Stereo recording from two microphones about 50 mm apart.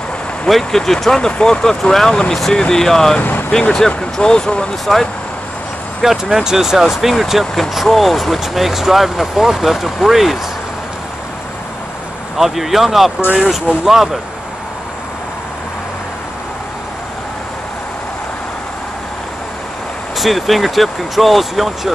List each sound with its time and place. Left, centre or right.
0.5 s speech: centre
3.2 s speech: left
3.7 s speech: centre
6.0 s speech: centre
12.4 s speech: centre
20.2 s speech: centre